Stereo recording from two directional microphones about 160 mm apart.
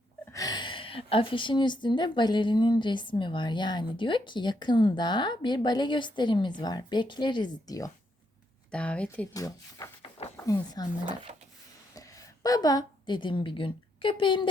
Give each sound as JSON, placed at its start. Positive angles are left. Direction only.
{"t": 0.3, "sound": "a woman's voice", "side_deg": 25}
{"t": 8.7, "sound": "speech", "side_deg": 5}
{"t": 9.3, "sound": "speech", "side_deg": 20}
{"t": 11.0, "sound": "speech", "side_deg": -40}
{"t": 11.9, "sound": "a woman's voice", "side_deg": 20}